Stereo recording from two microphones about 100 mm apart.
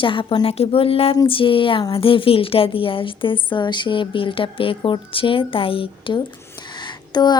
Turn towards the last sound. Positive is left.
turn(degrees=45)  # may be behind; listen again after turning